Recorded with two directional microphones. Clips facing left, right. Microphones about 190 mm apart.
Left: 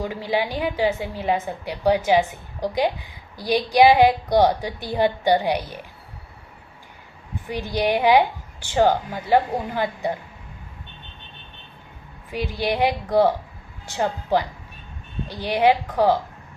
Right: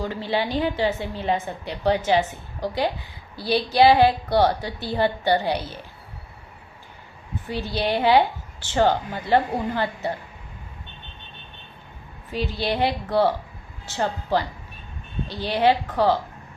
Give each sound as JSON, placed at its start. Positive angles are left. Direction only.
{"t": 0.0, "sound": "a woman's voice", "side_deg": 10}
{"t": 7.4, "sound": "a woman's voice", "side_deg": 15}
{"t": 12.3, "sound": "a woman's voice", "side_deg": 10}